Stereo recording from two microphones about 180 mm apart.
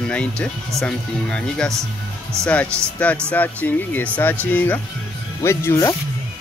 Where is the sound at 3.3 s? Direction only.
10° left (ahead or behind).